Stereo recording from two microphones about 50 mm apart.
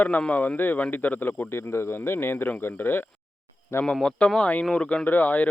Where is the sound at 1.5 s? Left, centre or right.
Left.